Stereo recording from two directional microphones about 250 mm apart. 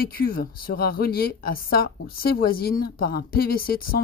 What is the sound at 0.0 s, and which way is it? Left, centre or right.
Speech, left.